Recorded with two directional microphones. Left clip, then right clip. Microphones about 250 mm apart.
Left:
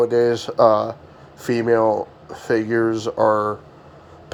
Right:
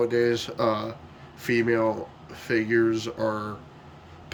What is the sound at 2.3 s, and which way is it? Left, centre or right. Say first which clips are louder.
Speech: left 4 dB; centre.